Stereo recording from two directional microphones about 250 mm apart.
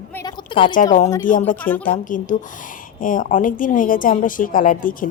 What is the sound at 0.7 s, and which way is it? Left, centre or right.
Speech, left.